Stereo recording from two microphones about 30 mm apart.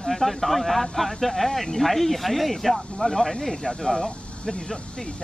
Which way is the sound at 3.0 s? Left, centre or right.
Left.